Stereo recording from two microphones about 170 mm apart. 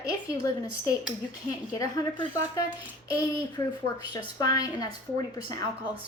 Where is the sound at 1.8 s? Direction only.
20° left (ahead or behind).